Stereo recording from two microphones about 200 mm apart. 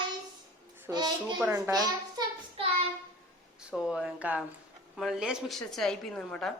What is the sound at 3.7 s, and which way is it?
A woman's voice, centre (ahead or behind).